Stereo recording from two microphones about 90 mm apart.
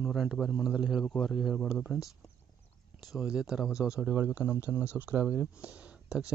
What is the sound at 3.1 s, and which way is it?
Speech, 10° right (ahead or behind).